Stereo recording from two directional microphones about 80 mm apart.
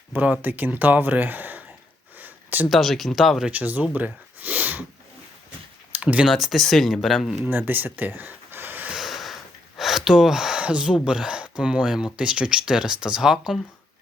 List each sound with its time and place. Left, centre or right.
0.1 s speech: right
2.1 s a sound: right
2.6 s speech: centre
3.5 s speech: right
6.0 s speech: centre
6.2 s speech: centre
7.4 s speech: right
8.9 s a sound: centre
12.1 s speech: centre